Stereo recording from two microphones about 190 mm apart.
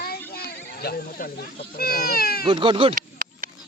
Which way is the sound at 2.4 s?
25° right (ahead or behind).